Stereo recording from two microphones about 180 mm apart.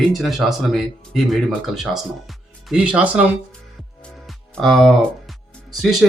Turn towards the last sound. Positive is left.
turn(degrees=-5)  # may be behind; listen again after turning